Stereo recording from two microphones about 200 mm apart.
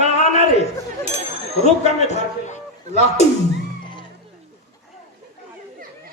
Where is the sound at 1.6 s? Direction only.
35° left (ahead or behind).